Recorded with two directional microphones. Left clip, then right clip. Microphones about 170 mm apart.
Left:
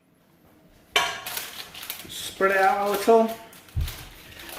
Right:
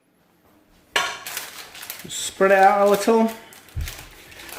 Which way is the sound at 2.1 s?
55° right (ahead or behind).